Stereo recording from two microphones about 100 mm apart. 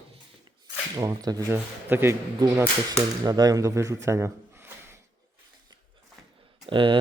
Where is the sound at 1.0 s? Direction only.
40° right (ahead or behind).